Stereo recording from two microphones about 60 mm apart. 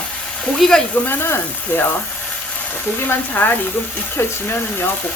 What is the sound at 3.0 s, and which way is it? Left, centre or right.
Speech, left.